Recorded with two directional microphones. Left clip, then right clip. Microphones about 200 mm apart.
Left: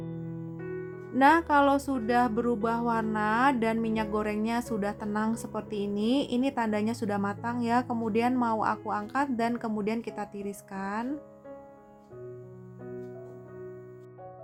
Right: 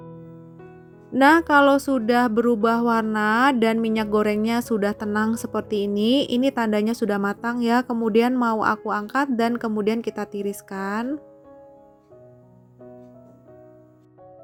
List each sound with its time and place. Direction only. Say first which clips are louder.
0.5 s music: left 7 dB; centre (ahead or behind)
1.1 s speech: right 6 dB; 25° right (ahead or behind)